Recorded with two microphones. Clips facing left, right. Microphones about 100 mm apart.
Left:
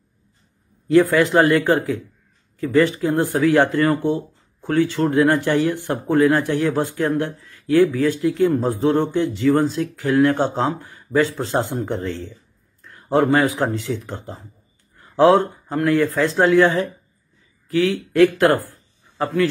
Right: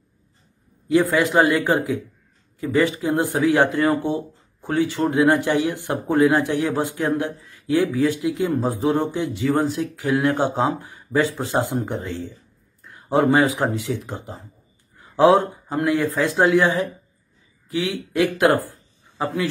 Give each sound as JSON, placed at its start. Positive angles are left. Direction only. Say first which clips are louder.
{"t": 0.8, "sound": "a man's voice", "louder": "left 3 dB", "side_deg": -15}